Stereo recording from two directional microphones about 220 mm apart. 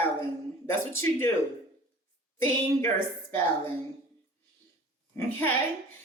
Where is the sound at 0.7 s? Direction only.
10° left (ahead or behind).